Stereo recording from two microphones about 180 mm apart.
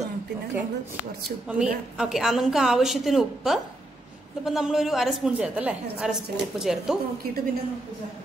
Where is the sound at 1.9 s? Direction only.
5° right (ahead or behind).